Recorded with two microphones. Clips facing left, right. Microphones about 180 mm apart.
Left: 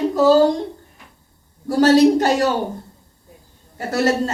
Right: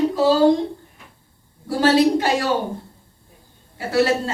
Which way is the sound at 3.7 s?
45° left (ahead or behind).